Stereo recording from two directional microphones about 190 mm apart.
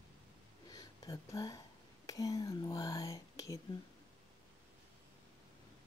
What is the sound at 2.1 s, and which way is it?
Whispering, 20° left (ahead or behind).